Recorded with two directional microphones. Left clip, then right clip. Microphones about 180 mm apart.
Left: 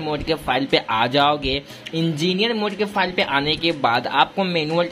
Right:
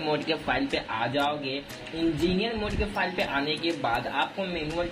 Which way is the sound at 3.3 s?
40° left (ahead or behind).